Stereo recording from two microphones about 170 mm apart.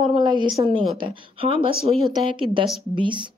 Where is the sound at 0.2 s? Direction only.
25° right (ahead or behind).